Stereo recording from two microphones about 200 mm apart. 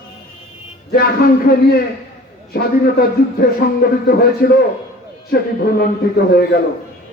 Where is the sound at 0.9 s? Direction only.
50° left (ahead or behind).